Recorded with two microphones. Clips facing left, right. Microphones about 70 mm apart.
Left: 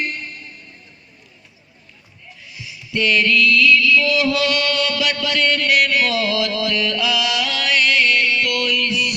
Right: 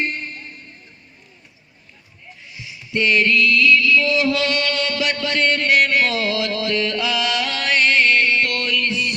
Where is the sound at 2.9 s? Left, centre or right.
Right.